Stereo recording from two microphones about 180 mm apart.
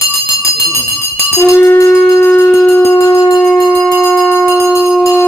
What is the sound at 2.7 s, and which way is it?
Music, 15° left (ahead or behind).